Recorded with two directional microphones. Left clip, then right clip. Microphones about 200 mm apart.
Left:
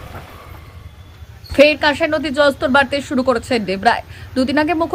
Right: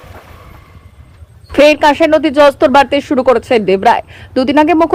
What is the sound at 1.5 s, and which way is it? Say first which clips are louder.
Speech: right 5 dB; 25° right (ahead or behind).